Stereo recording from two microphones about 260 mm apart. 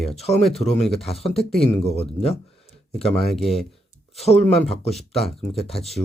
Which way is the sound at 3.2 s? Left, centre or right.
Centre.